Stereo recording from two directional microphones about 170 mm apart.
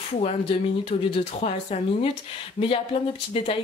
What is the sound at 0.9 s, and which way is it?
A woman's voice, 35° left (ahead or behind).